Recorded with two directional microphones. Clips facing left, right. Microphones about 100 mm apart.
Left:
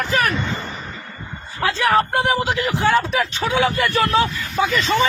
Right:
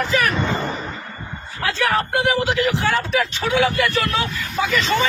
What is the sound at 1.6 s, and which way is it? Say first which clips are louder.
A man's voice: left 3 dB; 20° left (ahead or behind).